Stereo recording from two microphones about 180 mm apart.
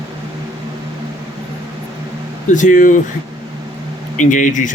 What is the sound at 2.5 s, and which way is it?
Speech, 45° left (ahead or behind).